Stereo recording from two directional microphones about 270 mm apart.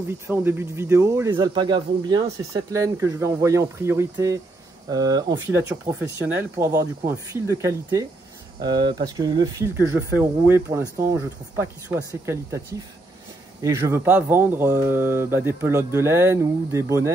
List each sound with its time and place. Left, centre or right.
0.3 s speech: centre